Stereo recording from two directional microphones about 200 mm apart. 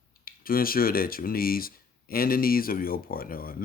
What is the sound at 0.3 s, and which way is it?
Speech, 45° left (ahead or behind).